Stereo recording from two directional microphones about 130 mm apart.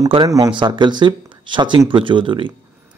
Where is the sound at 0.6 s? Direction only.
35° right (ahead or behind).